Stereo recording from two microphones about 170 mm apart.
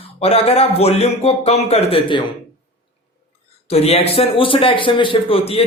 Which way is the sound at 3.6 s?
35° left (ahead or behind).